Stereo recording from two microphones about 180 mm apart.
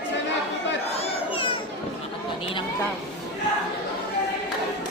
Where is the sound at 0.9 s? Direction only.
30° left (ahead or behind).